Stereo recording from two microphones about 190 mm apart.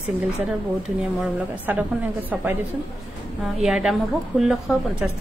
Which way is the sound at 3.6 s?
5° right (ahead or behind).